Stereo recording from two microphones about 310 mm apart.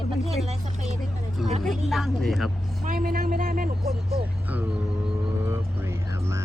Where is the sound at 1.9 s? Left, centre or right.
Centre.